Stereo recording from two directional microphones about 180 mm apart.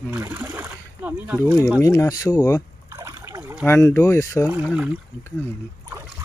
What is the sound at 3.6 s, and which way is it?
Speech, 15° left (ahead or behind).